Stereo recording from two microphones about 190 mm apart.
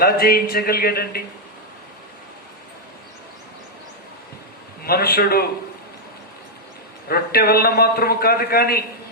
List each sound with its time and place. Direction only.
0.0 s a man's voice: 55° left (ahead or behind)
4.9 s a man's voice: 55° left (ahead or behind)
7.1 s a man's voice: 55° left (ahead or behind)